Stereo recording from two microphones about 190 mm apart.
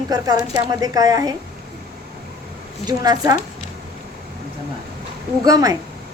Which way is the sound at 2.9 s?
20° right (ahead or behind).